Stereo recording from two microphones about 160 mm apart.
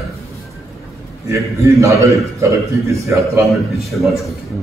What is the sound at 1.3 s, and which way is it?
A man's voice, 20° right (ahead or behind).